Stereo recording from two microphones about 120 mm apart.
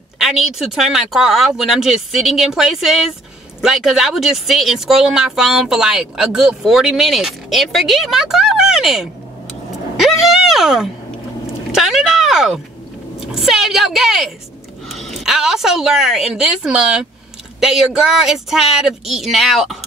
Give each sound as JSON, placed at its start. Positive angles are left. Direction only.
{"t": 0.2, "sound": "speech", "side_deg": 0}